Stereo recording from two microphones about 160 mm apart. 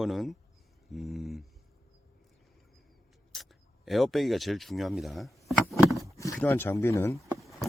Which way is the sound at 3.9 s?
Centre (ahead or behind).